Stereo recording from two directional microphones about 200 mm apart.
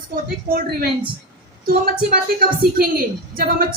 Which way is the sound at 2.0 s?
45° right (ahead or behind).